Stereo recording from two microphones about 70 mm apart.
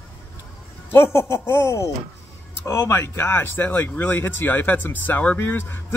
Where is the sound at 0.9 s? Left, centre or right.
Left.